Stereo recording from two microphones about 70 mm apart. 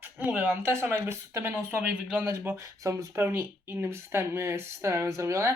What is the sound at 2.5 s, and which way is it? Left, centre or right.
Speech, right.